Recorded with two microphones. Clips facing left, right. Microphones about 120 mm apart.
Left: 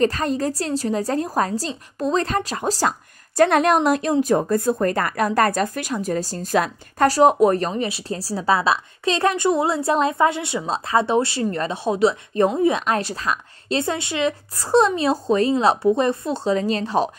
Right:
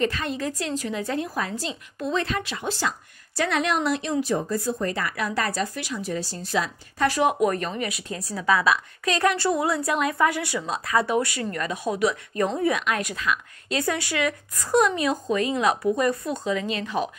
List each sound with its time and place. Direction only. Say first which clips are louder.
0.0 s a woman's voice: left 6 dB; 40° left (ahead or behind)
7.1 s a woman's voice: left 7 dB; 35° left (ahead or behind)
12.8 s a woman's voice: left 4 dB; 35° left (ahead or behind)